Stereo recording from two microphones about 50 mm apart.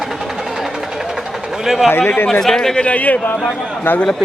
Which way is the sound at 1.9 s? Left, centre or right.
Left.